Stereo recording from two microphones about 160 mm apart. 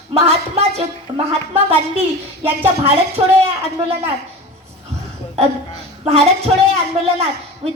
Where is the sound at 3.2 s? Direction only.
30° right (ahead or behind).